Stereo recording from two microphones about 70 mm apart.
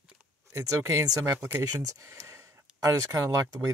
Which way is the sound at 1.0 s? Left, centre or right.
Right.